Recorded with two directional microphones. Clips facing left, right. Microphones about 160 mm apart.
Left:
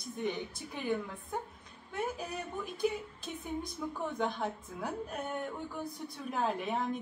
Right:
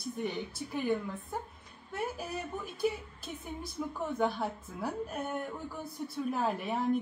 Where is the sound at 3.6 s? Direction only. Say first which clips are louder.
Right 1 dB; 5° right (ahead or behind).